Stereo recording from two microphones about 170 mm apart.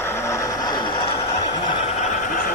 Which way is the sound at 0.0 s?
15° left (ahead or behind).